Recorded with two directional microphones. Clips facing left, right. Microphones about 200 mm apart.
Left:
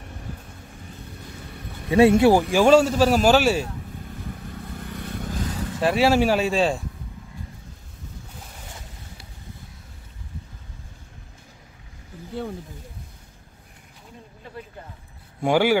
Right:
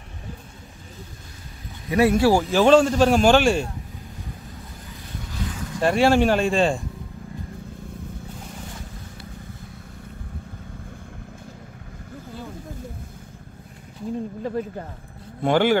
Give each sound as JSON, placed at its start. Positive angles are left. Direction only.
{"t": 1.9, "sound": "speech", "side_deg": 25}
{"t": 2.5, "sound": "a man's voice", "side_deg": 10}
{"t": 5.3, "sound": "vehicle", "side_deg": 45}
{"t": 5.8, "sound": "a man's voice", "side_deg": 5}
{"t": 14.4, "sound": "speech", "side_deg": -45}
{"t": 15.4, "sound": "speech", "side_deg": 10}